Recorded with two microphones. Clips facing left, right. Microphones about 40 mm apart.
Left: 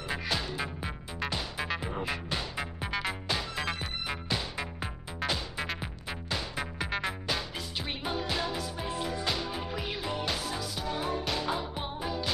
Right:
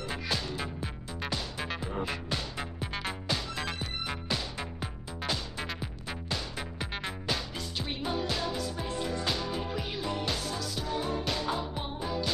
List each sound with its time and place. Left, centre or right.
0.1 s music: centre